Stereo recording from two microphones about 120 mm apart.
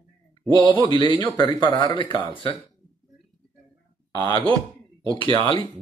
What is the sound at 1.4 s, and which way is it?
Speech, 40° left (ahead or behind).